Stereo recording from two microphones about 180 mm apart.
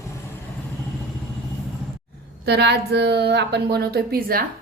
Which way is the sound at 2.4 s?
65° right (ahead or behind).